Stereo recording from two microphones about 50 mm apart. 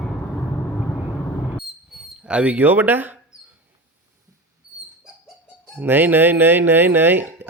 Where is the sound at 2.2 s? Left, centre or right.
Right.